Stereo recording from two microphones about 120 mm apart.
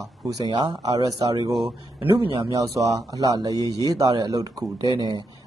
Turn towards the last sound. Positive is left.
turn(degrees=-40)  # may be behind; listen again after turning